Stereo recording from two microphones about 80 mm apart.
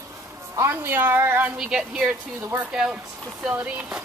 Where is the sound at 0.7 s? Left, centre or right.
Right.